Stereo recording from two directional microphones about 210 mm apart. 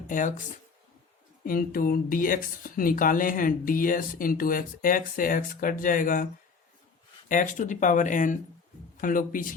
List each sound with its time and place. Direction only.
0.1 s speech: 40° left (ahead or behind)
1.5 s speech: 45° left (ahead or behind)
7.3 s speech: 40° left (ahead or behind)